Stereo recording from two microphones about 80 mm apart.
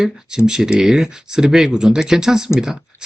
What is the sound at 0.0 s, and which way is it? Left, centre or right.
Speech, centre.